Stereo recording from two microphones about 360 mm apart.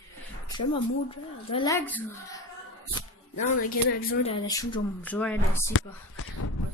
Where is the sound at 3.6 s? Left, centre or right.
Centre.